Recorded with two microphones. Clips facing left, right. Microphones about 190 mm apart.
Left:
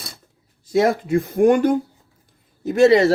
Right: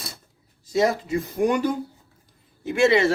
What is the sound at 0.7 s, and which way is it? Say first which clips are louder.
Speech: left 4 dB; 55° left (ahead or behind).